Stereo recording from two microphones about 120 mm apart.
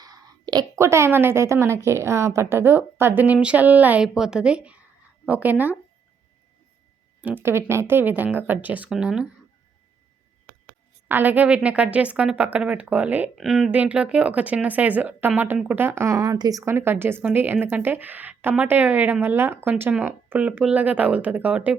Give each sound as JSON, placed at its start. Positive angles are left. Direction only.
{"t": 0.0, "sound": "a sound", "side_deg": -30}
{"t": 0.8, "sound": "a woman's voice", "side_deg": -25}
{"t": 7.2, "sound": "speech", "side_deg": -15}
{"t": 11.1, "sound": "speech", "side_deg": -15}
{"t": 13.3, "sound": "speech", "side_deg": 0}